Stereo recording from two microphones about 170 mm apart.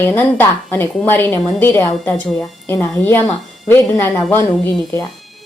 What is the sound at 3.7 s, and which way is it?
Speech, 15° left (ahead or behind).